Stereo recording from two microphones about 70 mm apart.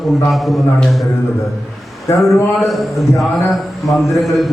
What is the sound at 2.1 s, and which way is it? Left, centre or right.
Speech, left.